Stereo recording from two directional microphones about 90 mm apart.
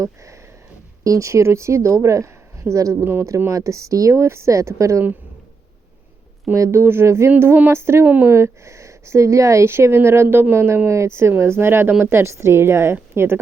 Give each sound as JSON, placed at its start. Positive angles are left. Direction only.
{"t": 1.0, "sound": "speech", "side_deg": -35}
{"t": 6.5, "sound": "speech", "side_deg": -30}
{"t": 8.0, "sound": "speech", "side_deg": -20}
{"t": 8.3, "sound": "speech", "side_deg": -30}